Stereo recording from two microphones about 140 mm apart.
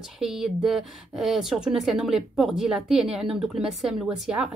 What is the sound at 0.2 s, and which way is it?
A woman's voice, 5° right (ahead or behind).